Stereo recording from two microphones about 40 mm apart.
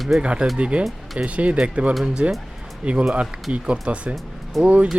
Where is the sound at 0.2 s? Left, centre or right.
Right.